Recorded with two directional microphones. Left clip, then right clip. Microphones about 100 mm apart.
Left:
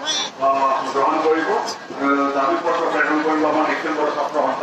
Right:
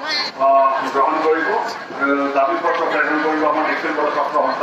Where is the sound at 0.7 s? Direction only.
30° left (ahead or behind).